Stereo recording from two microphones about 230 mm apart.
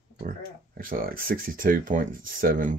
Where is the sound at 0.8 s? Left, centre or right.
Right.